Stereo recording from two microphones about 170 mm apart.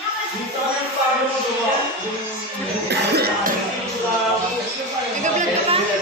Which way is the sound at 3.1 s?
70° right (ahead or behind).